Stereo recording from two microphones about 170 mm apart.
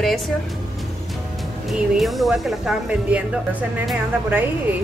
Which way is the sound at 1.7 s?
Centre (ahead or behind).